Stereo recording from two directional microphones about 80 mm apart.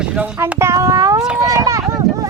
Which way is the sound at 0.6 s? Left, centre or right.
Right.